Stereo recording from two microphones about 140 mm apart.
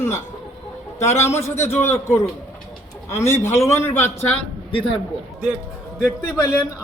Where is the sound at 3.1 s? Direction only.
20° left (ahead or behind).